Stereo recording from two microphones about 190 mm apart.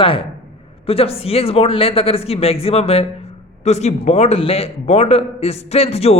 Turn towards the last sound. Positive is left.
turn(degrees=35)  # may be behind; listen again after turning